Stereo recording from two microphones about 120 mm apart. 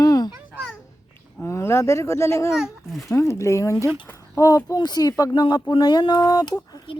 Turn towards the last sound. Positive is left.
turn(degrees=35)  # may be behind; listen again after turning